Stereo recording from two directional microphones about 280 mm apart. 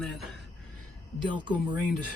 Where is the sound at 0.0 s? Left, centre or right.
Centre.